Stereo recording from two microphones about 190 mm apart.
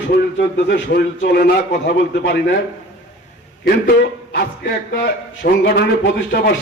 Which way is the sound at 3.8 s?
60° left (ahead or behind).